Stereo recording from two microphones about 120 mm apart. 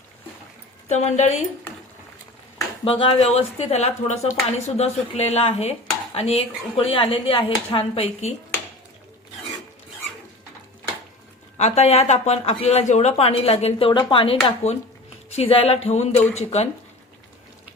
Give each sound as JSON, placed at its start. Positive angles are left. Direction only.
{"t": 0.9, "sound": "a woman's voice", "side_deg": 70}
{"t": 2.8, "sound": "speech", "side_deg": 45}
{"t": 11.5, "sound": "speech", "side_deg": 65}
{"t": 13.9, "sound": "speech", "side_deg": 40}
{"t": 15.3, "sound": "speech", "side_deg": 60}